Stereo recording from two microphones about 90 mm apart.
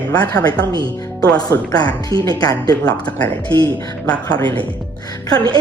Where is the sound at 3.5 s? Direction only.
55° right (ahead or behind).